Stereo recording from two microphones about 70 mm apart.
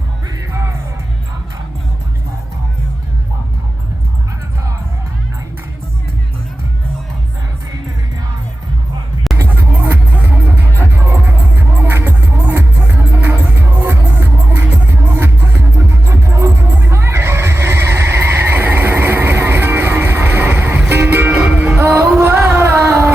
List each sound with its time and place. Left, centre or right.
0.5 s music: right
9.5 s music: right
22.2 s a sound: right